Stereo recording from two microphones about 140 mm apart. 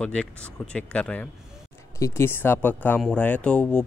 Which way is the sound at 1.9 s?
20° left (ahead or behind).